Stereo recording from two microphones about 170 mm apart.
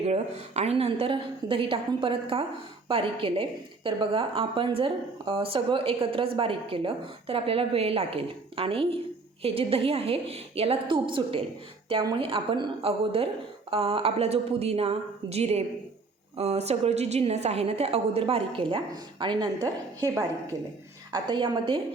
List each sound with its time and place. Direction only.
0.0 s a woman's voice: 40° right (ahead or behind)